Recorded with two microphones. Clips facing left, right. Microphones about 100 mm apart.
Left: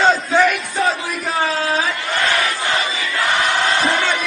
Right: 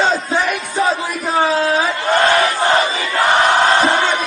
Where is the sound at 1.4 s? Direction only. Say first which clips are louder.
Right 4 dB; 30° right (ahead or behind).